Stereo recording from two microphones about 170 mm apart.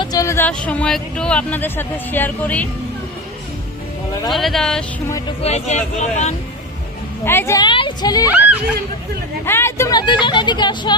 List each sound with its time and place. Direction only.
0.0 s speech: 20° left (ahead or behind)
4.3 s speech: centre (ahead or behind)
5.0 s speech: 20° left (ahead or behind)
5.4 s speech: 40° left (ahead or behind)
7.3 s speech: 15° left (ahead or behind)
8.3 s speech: 10° right (ahead or behind)
9.5 s speech: 15° left (ahead or behind)
10.2 s speech: 25° left (ahead or behind)